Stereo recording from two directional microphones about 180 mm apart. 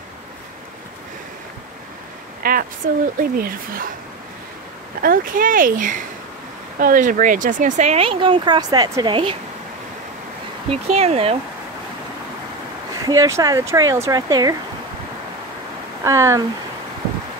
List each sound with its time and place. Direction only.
2.4 s a sound: 50° right (ahead or behind)
2.8 s speech: 50° right (ahead or behind)
5.0 s speech: 50° right (ahead or behind); by 9.4 s 30° right (ahead or behind)
10.7 s speech: 35° right (ahead or behind)
13.0 s speech: 20° right (ahead or behind)
16.0 s speech: 15° right (ahead or behind)